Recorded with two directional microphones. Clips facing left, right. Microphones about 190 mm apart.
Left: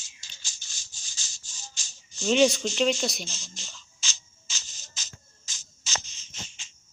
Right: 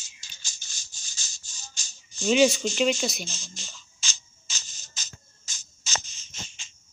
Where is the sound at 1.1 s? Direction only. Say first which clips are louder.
Right 1 dB; 45° right (ahead or behind).